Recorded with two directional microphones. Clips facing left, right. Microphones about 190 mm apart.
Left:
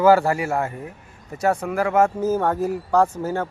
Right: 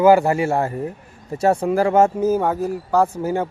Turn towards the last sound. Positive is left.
turn(degrees=-15)  # may be behind; listen again after turning